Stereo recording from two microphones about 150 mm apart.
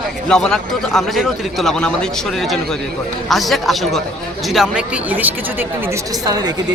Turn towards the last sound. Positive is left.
turn(degrees=-25)  # may be behind; listen again after turning